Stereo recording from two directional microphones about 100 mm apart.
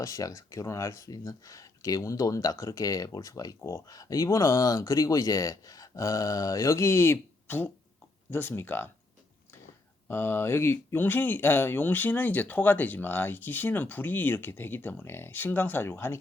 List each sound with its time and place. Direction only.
0.0 s speech: 35° left (ahead or behind)
10.1 s speech: 25° left (ahead or behind)